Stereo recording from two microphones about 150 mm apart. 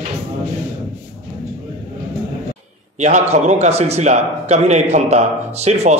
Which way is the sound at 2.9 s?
50° right (ahead or behind).